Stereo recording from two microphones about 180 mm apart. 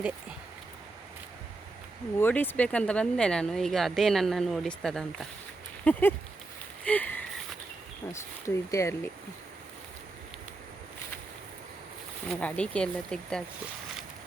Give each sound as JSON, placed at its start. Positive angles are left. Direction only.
{"t": 2.1, "sound": "speech", "side_deg": 10}
{"t": 6.8, "sound": "a sound", "side_deg": 10}
{"t": 8.1, "sound": "speech", "side_deg": 15}
{"t": 12.3, "sound": "speech", "side_deg": 5}